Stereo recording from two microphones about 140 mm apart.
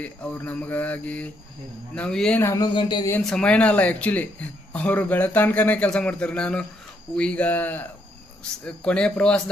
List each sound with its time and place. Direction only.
0.0 s a man's voice: 10° left (ahead or behind)
2.4 s speech: 20° left (ahead or behind)
2.7 s speech: 30° left (ahead or behind)
3.2 s a man's voice: 5° left (ahead or behind)